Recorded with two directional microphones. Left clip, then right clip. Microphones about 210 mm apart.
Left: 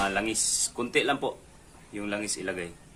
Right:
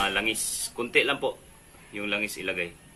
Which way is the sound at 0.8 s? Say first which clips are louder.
Right 3 dB; 45° left (ahead or behind).